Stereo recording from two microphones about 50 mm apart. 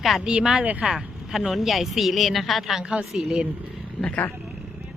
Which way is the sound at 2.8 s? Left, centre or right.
Centre.